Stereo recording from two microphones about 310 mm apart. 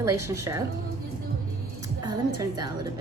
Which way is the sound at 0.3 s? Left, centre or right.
Centre.